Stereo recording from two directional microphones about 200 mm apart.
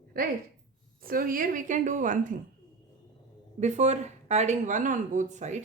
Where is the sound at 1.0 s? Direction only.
45° right (ahead or behind).